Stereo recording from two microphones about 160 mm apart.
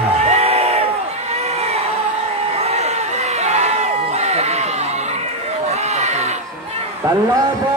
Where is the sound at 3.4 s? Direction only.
45° right (ahead or behind).